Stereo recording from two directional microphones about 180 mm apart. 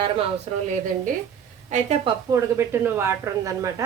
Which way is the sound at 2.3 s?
15° right (ahead or behind).